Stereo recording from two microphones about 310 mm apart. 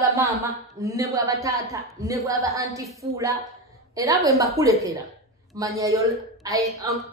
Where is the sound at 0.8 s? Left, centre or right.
Centre.